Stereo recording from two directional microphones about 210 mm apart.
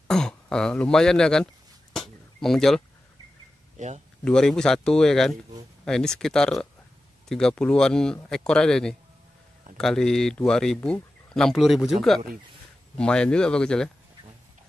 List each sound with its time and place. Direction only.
0.1 s speech: 5° left (ahead or behind)
2.0 s a sound: centre (ahead or behind)
3.7 s speech: 35° right (ahead or behind)
4.2 s speech: 5° left (ahead or behind)